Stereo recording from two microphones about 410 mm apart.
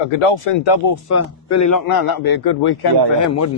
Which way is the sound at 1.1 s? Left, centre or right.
Left.